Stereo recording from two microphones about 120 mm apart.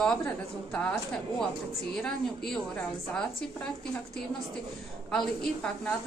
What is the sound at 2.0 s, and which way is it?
A woman's voice, 5° left (ahead or behind).